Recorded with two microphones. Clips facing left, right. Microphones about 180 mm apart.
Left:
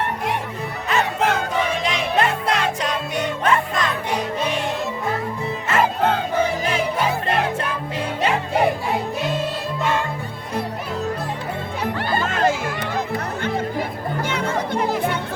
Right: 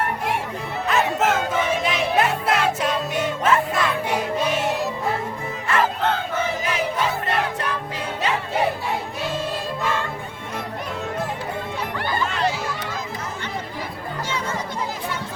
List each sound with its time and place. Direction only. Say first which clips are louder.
0.9 s music: even; centre (ahead or behind)
12.2 s a sound: left 4 dB; 45° left (ahead or behind)
14.3 s music: left 5 dB; 65° left (ahead or behind)